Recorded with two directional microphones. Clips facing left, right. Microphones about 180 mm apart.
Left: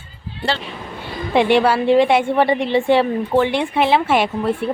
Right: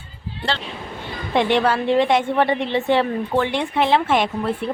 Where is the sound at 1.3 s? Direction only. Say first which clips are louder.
Left 3 dB; 10° left (ahead or behind).